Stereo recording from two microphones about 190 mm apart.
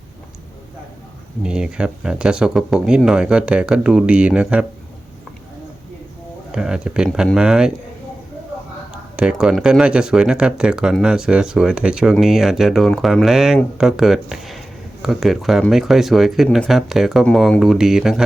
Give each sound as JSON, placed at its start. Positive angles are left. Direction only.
{"t": 1.5, "sound": "speech", "side_deg": -5}
{"t": 6.5, "sound": "speech", "side_deg": -5}
{"t": 8.9, "sound": "speech", "side_deg": -5}